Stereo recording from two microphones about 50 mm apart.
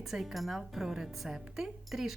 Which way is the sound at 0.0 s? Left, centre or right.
Centre.